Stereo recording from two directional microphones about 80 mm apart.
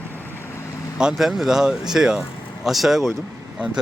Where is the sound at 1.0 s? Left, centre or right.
Centre.